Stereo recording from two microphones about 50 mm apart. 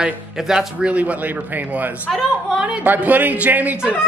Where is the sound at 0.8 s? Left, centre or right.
Right.